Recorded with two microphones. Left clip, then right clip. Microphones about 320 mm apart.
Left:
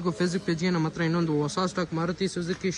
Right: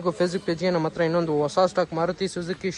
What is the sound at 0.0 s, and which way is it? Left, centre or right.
A man's voice, centre.